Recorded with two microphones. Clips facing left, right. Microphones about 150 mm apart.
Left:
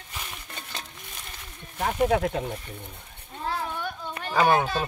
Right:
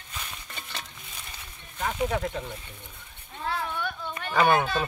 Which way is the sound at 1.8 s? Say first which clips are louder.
Left 5 dB; 50° left (ahead or behind).